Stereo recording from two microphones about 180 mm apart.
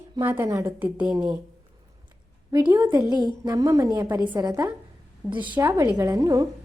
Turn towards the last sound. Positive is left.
turn(degrees=-20)  # may be behind; listen again after turning